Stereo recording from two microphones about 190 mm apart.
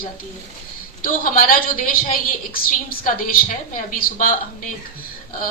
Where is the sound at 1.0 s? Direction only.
45° left (ahead or behind).